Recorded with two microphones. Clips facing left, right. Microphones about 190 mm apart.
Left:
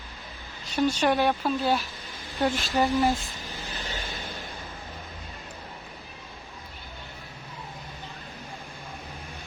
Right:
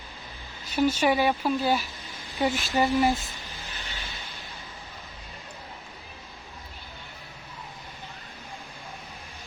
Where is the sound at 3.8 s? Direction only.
45° left (ahead or behind).